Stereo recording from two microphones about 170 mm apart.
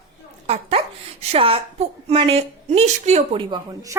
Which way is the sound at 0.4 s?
35° right (ahead or behind).